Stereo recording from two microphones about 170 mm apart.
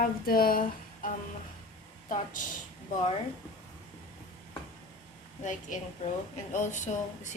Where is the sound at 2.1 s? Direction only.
50° left (ahead or behind).